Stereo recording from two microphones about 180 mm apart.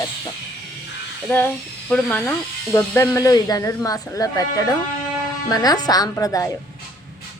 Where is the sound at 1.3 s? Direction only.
10° left (ahead or behind).